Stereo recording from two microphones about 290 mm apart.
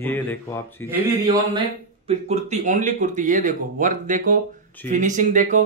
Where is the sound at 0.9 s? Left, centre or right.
Centre.